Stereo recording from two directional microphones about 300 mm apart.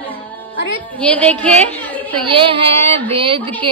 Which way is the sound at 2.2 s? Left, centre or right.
Centre.